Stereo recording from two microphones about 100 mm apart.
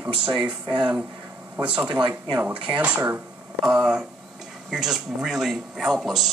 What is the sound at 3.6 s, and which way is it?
A man's voice, 5° right (ahead or behind).